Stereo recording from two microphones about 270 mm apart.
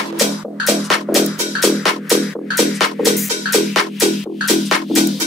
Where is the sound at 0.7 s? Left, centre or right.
Centre.